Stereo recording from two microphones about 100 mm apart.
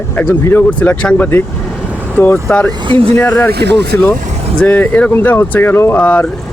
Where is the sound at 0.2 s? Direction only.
20° left (ahead or behind).